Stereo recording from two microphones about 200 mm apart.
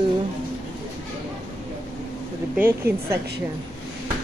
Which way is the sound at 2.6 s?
10° right (ahead or behind).